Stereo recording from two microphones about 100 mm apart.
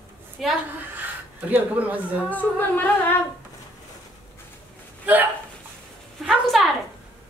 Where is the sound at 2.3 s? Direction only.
20° left (ahead or behind).